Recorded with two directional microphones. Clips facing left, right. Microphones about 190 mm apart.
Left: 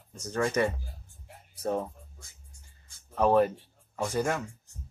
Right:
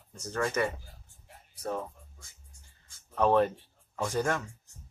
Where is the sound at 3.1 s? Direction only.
5° left (ahead or behind).